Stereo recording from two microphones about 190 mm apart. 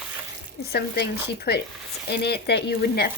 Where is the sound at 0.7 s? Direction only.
60° left (ahead or behind).